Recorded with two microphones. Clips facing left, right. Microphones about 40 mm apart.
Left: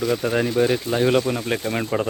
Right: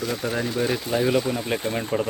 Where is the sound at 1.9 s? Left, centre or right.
Centre.